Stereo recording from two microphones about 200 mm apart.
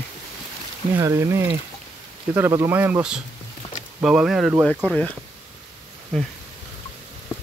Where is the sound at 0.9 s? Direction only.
15° right (ahead or behind); by 5.1 s 5° left (ahead or behind).